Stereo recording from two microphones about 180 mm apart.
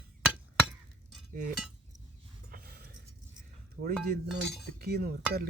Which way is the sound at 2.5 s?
55° right (ahead or behind).